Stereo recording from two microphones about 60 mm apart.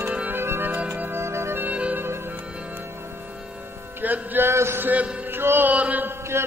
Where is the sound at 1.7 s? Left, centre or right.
Right.